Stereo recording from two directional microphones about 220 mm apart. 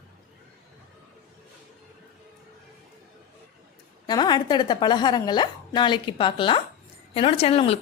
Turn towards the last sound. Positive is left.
turn(degrees=25)  # may be behind; listen again after turning